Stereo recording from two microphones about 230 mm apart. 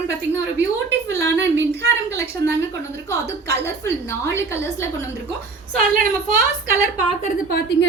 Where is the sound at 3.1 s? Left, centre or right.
Centre.